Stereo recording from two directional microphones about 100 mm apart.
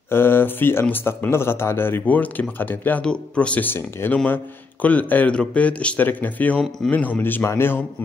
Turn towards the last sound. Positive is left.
turn(degrees=20)  # may be behind; listen again after turning